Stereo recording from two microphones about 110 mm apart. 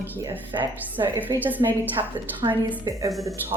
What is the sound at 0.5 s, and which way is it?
Speech, 45° right (ahead or behind).